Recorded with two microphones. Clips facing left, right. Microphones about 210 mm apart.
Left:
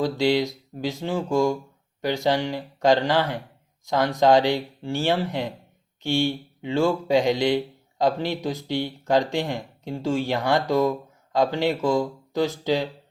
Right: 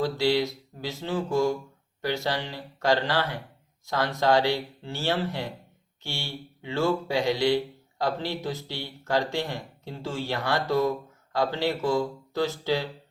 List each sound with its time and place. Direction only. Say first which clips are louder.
0.0 s speech: left 3 dB; 15° left (ahead or behind)